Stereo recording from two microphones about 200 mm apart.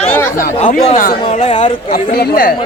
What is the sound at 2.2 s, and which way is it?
Speech, 50° left (ahead or behind).